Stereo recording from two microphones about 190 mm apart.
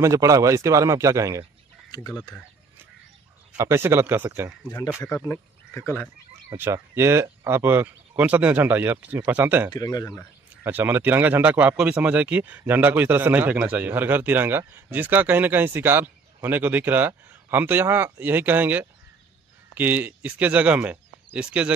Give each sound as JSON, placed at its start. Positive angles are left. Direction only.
{"t": 0.0, "sound": "speech", "side_deg": -15}
{"t": 2.1, "sound": "speech", "side_deg": 5}
{"t": 3.5, "sound": "speech", "side_deg": -15}
{"t": 5.3, "sound": "speech", "side_deg": 10}
{"t": 6.5, "sound": "speech", "side_deg": -15}
{"t": 9.7, "sound": "speech", "side_deg": 20}
{"t": 10.6, "sound": "speech", "side_deg": -10}